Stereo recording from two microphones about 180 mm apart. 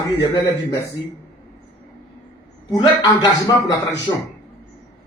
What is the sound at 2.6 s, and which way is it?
A man's voice, 20° left (ahead or behind).